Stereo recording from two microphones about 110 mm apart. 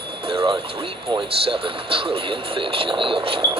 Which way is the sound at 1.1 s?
55° right (ahead or behind).